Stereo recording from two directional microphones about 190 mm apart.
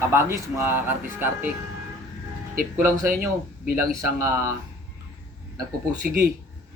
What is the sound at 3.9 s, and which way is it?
Speech, 15° right (ahead or behind).